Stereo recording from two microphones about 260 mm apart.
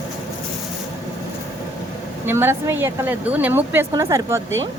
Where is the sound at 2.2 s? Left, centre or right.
Centre.